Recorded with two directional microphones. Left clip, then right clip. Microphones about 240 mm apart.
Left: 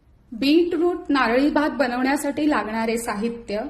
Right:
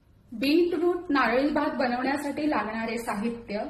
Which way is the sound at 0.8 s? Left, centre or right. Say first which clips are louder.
Left 4 dB; left.